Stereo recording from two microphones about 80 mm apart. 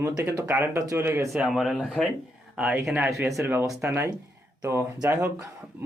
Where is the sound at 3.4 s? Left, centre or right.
Right.